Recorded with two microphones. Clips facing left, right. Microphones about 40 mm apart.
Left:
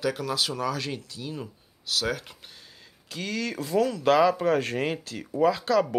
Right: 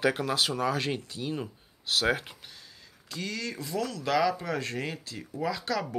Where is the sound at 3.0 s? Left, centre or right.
Left.